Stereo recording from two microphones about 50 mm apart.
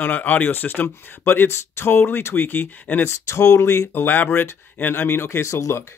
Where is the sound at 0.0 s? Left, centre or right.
Left.